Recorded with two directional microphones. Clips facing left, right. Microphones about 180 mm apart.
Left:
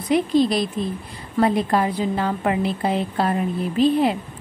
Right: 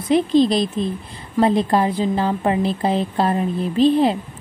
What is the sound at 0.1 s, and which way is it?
A woman's voice, 25° right (ahead or behind).